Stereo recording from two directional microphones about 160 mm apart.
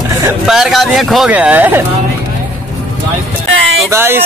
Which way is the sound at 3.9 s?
15° right (ahead or behind).